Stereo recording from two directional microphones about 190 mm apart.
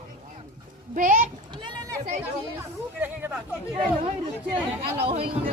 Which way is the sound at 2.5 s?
10° right (ahead or behind).